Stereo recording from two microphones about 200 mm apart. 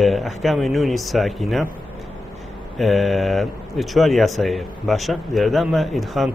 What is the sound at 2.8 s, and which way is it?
Speech, centre (ahead or behind).